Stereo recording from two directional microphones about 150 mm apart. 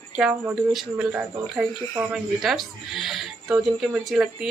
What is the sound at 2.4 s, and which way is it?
Speech, centre (ahead or behind).